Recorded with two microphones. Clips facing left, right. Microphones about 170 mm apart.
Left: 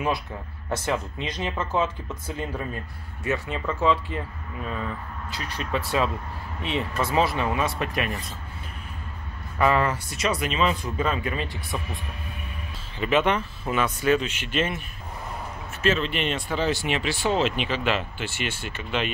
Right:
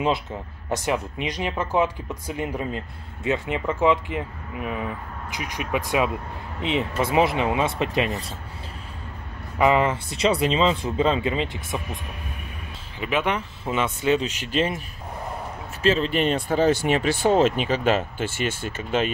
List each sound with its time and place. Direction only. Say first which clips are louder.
0.7 s speech: right 2 dB; 15° right (ahead or behind)
9.6 s speech: right 3 dB; 20° right (ahead or behind)
13.0 s speech: left 2 dB; 10° right (ahead or behind)
13.7 s speech: right 1 dB; 20° right (ahead or behind)
14.2 s speech: right 3 dB; 40° right (ahead or behind)
15.8 s speech: right 3 dB; 35° right (ahead or behind)